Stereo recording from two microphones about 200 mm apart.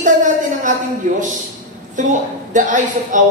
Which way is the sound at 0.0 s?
40° right (ahead or behind).